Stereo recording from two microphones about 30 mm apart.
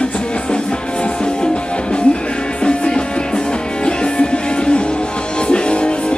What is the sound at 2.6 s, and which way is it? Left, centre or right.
Music, left.